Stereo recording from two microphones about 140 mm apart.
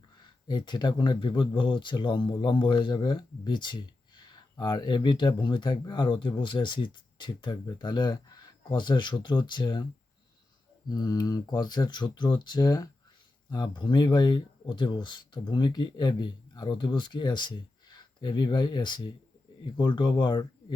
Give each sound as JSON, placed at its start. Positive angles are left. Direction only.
{"t": 0.4, "sound": "speech", "side_deg": 30}
{"t": 10.8, "sound": "speech", "side_deg": 30}